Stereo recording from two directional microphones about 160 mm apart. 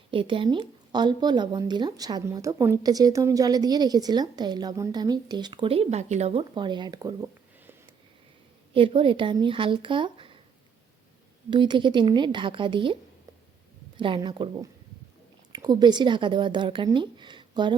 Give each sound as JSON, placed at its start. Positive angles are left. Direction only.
{"t": 0.1, "sound": "a woman's voice", "side_deg": -35}
{"t": 6.5, "sound": "a woman's voice", "side_deg": -30}
{"t": 8.7, "sound": "speech", "side_deg": -35}
{"t": 11.5, "sound": "a woman's voice", "side_deg": -30}